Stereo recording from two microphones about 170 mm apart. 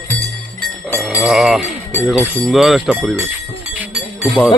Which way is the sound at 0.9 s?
5° right (ahead or behind).